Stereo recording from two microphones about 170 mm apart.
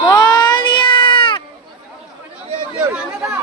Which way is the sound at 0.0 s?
25° left (ahead or behind).